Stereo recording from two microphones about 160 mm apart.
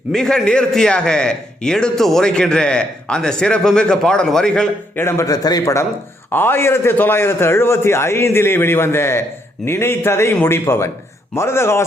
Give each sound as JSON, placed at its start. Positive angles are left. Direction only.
{"t": 0.1, "sound": "a man's voice", "side_deg": 5}